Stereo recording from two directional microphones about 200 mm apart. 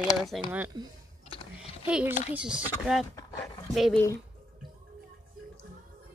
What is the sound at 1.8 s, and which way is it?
A child's voice, 5° right (ahead or behind).